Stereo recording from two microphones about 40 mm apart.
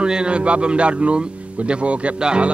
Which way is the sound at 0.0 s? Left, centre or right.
Right.